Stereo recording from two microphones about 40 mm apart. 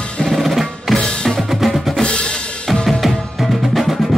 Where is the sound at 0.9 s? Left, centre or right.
Centre.